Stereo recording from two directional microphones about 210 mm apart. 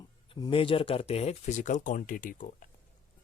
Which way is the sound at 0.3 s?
20° left (ahead or behind).